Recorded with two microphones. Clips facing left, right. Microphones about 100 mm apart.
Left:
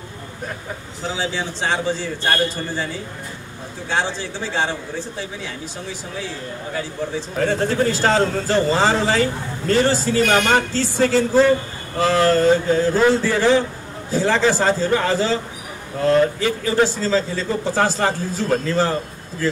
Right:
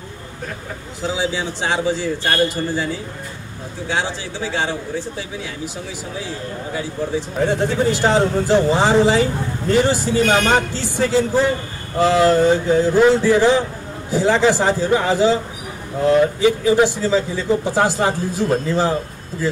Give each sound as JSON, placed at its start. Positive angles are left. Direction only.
{"t": 1.1, "sound": "speech", "side_deg": -10}
{"t": 3.9, "sound": "speech", "side_deg": -15}
{"t": 6.7, "sound": "speech", "side_deg": -10}